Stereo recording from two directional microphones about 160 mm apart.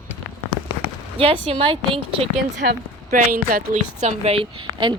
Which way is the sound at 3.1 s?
60° right (ahead or behind).